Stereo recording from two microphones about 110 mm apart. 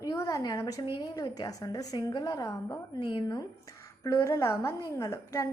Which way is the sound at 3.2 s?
35° left (ahead or behind).